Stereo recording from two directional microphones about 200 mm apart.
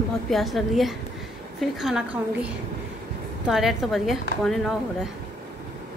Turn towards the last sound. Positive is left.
turn(degrees=0)  # may be behind; listen again after turning